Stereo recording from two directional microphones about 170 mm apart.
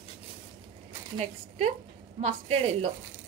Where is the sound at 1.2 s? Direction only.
40° right (ahead or behind).